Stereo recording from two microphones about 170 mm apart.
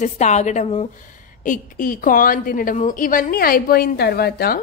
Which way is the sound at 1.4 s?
50° left (ahead or behind).